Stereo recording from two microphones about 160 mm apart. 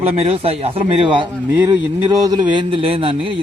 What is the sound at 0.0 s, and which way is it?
A man's voice, 40° right (ahead or behind).